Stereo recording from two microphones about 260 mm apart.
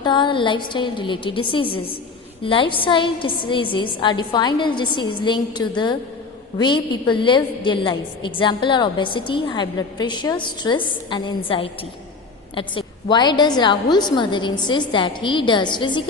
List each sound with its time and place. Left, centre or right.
0.0 s a woman's voice: centre